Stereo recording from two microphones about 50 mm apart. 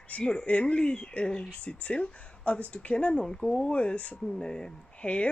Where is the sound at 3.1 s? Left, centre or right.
Centre.